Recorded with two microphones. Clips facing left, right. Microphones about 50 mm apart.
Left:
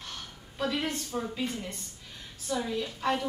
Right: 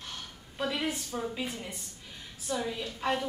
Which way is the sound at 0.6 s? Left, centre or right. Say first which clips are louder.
Left 1 dB; centre.